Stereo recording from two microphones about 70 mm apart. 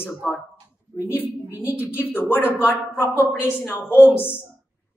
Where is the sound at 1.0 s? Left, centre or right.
Left.